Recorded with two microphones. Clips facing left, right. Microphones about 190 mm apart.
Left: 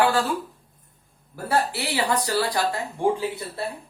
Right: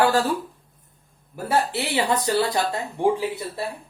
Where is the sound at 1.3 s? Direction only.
20° right (ahead or behind).